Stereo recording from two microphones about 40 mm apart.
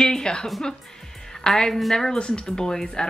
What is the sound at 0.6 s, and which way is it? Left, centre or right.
Music, centre.